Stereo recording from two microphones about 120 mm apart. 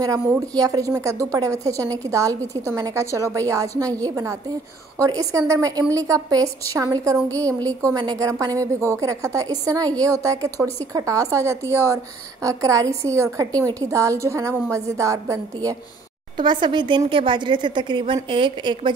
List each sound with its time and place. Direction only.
0.0 s a woman's voice: 30° right (ahead or behind)
16.3 s speech: 40° right (ahead or behind)